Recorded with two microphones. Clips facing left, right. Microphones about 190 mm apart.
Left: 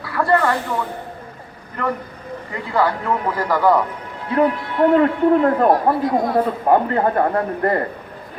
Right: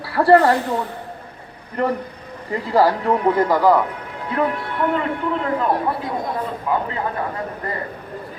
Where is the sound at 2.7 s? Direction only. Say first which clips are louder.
Right 3 dB; 35° right (ahead or behind).